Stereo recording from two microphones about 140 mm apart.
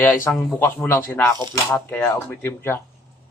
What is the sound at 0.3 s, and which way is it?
Speech, 10° left (ahead or behind).